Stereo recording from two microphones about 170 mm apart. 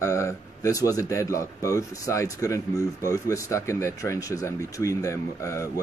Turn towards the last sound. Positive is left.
turn(degrees=15)  # may be behind; listen again after turning